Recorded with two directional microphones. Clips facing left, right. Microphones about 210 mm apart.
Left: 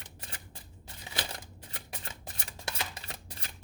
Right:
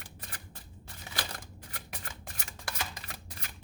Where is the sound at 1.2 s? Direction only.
25° left (ahead or behind).